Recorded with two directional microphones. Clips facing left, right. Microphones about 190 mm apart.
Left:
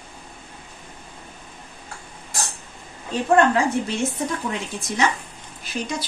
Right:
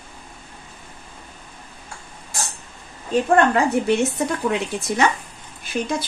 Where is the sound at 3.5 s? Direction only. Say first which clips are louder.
Right 4 dB; 65° right (ahead or behind).